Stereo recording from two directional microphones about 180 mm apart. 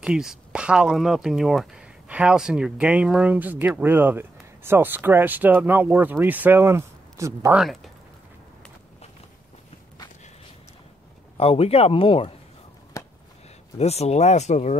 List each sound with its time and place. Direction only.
0.0 s speech: 5° right (ahead or behind)
7.5 s speech: centre (ahead or behind)
11.3 s speech: 35° left (ahead or behind)
12.9 s a sound: 15° left (ahead or behind)
13.7 s speech: 35° left (ahead or behind)